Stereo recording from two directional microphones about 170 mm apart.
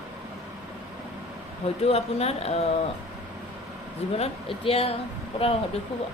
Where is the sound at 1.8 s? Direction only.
35° left (ahead or behind).